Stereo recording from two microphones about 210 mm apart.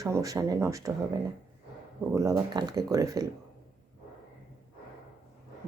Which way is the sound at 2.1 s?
15° right (ahead or behind).